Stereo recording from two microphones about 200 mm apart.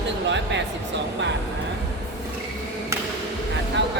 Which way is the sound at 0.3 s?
60° right (ahead or behind).